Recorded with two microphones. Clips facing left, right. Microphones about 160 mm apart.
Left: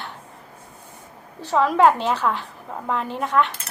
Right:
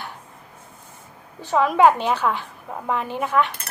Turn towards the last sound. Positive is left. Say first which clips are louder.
# even
turn(degrees=-5)  # may be behind; listen again after turning